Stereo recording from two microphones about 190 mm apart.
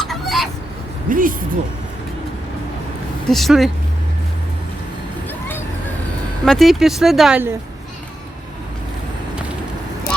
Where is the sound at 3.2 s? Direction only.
Centre (ahead or behind).